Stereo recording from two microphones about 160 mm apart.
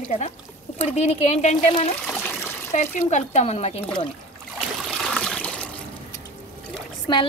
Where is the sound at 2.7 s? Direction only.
45° left (ahead or behind).